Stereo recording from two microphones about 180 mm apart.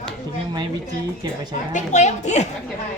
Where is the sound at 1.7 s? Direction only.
40° left (ahead or behind).